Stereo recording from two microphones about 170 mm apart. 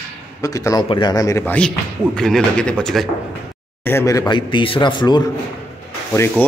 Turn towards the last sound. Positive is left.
turn(degrees=15)  # may be behind; listen again after turning